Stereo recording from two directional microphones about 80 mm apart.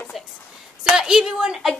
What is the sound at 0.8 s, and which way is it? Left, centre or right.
Speech, centre.